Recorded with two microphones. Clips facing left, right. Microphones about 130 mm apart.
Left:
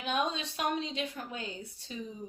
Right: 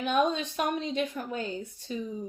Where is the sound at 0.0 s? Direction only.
50° right (ahead or behind).